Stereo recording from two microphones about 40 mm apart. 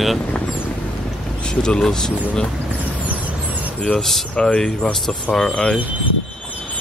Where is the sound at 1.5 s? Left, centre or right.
Centre.